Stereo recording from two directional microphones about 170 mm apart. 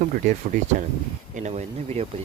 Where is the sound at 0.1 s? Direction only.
50° right (ahead or behind).